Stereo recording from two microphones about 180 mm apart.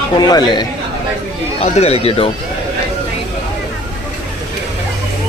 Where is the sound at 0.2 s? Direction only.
20° left (ahead or behind).